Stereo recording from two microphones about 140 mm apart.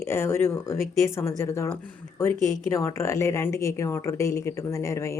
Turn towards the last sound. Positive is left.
turn(degrees=20)  # may be behind; listen again after turning